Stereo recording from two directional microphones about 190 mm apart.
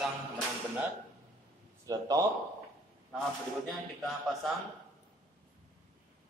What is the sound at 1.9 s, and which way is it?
Speech, 20° right (ahead or behind).